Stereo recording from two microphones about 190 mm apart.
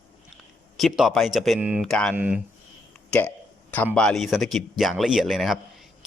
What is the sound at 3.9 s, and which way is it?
A man's voice, 5° left (ahead or behind).